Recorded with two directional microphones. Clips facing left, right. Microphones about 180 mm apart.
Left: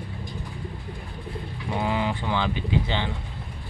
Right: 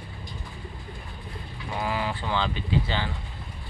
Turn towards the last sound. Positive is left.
turn(degrees=20)  # may be behind; listen again after turning